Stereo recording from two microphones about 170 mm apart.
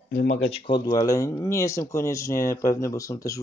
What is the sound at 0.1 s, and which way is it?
Speech, 70° left (ahead or behind).